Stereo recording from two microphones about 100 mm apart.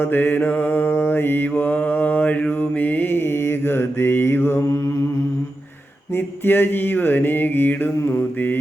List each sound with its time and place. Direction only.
0.0 s mantra: 20° left (ahead or behind)
6.1 s mantra: 20° left (ahead or behind)